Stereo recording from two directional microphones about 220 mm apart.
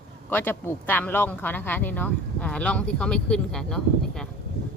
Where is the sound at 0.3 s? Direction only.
10° left (ahead or behind).